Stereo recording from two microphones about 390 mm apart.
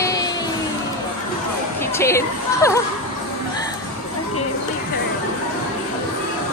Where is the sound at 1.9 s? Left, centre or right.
Centre.